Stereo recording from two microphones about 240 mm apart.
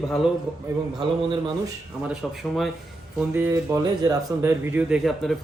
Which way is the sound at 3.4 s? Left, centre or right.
Centre.